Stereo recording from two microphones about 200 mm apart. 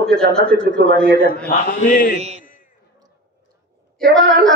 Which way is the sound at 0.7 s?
55° right (ahead or behind).